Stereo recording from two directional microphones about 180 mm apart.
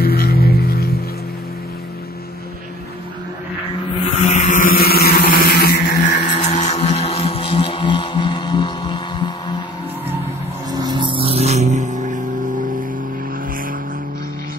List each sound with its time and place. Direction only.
0.0 s music: 55° left (ahead or behind)
4.3 s vehicle: 45° left (ahead or behind)
6.2 s music: 40° left (ahead or behind)
10.7 s music: 25° right (ahead or behind); by 12.2 s 45° right (ahead or behind)